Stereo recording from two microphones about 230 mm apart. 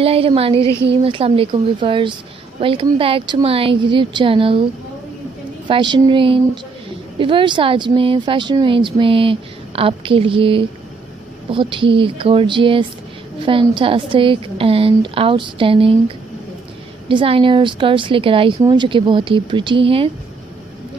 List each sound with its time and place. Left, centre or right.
0.0 s speech: right
5.7 s speech: centre
17.1 s speech: right